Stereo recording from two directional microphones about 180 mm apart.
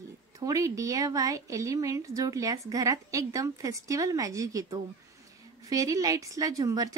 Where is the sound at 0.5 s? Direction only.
20° right (ahead or behind).